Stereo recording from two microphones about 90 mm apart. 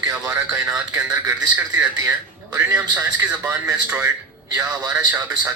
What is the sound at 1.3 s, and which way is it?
Speech, 20° right (ahead or behind).